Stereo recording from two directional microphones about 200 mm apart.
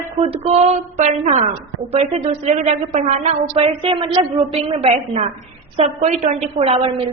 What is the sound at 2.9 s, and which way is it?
A woman's voice, 30° right (ahead or behind).